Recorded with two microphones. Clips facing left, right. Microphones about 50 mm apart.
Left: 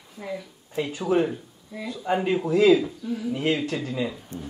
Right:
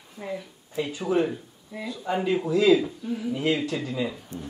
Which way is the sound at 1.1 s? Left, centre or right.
Left.